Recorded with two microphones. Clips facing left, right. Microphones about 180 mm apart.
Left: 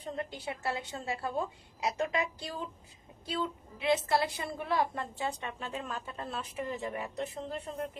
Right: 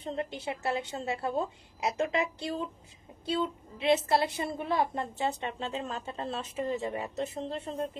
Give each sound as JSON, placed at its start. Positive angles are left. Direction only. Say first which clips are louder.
{"t": 0.0, "sound": "a woman's voice", "louder": "right 3 dB", "side_deg": -25}